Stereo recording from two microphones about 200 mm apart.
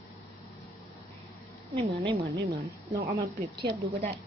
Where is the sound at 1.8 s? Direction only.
25° right (ahead or behind).